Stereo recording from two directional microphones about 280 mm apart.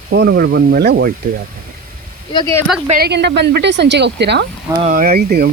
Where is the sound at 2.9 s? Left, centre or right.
Right.